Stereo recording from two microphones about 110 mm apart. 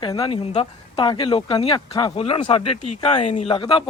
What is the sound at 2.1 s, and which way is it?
Speech, 65° left (ahead or behind).